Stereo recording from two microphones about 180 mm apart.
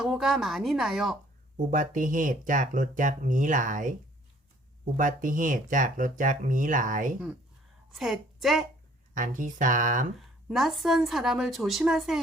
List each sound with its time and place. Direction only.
0.0 s speech: centre (ahead or behind)
1.7 s speech: 45° right (ahead or behind)
4.9 s speech: 45° right (ahead or behind)
7.9 s a woman's voice: centre (ahead or behind)
9.1 s speech: 45° right (ahead or behind)
10.2 s a woman's voice: centre (ahead or behind)